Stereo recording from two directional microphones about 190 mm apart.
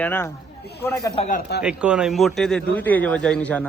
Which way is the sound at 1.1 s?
40° left (ahead or behind).